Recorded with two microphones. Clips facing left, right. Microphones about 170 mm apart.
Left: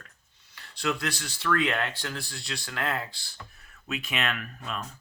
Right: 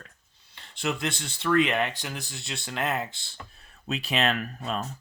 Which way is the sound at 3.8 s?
35° right (ahead or behind).